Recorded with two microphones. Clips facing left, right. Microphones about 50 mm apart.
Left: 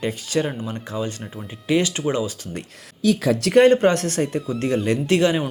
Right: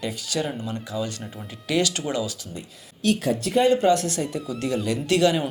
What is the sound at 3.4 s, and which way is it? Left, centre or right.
Speech, left.